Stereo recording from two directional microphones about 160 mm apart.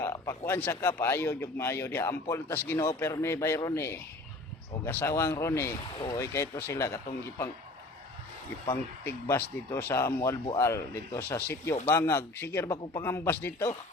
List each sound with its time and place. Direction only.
0.0 s speech: 20° left (ahead or behind)
9.3 s speech: 15° left (ahead or behind)